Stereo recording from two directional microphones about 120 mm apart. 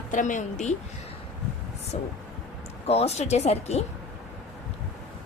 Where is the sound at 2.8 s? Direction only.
60° left (ahead or behind).